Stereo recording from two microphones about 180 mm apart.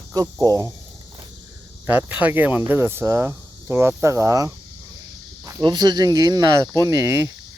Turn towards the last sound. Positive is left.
turn(degrees=-15)  # may be behind; listen again after turning